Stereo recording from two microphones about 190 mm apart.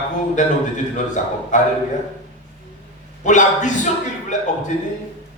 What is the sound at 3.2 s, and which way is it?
Speech, 40° left (ahead or behind).